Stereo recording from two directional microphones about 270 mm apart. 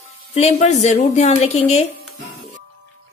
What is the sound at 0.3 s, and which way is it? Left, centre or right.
Speech, left.